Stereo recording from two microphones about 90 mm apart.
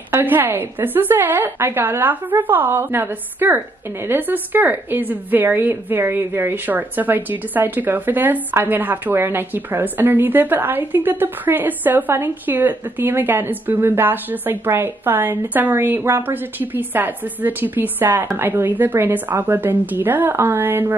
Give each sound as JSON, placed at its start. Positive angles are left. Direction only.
{"t": 0.1, "sound": "a woman's voice", "side_deg": -20}